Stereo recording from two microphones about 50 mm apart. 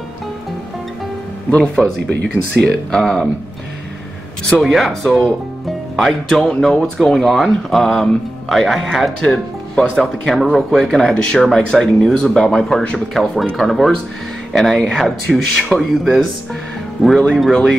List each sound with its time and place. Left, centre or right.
1.8 s speech: centre
4.6 s speech: centre
6.4 s speech: centre
9.2 s speech: centre
10.3 s speech: centre
17.3 s speech: centre